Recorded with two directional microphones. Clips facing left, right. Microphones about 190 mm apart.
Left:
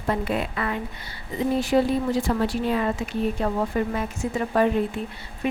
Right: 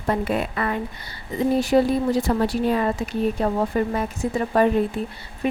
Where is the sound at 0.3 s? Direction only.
45° right (ahead or behind).